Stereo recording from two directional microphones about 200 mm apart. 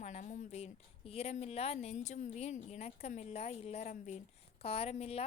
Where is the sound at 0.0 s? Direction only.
35° left (ahead or behind).